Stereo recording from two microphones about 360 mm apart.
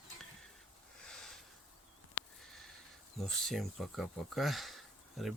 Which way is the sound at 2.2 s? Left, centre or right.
Left.